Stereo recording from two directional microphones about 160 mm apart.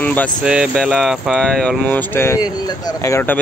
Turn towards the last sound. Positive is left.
turn(degrees=15)  # may be behind; listen again after turning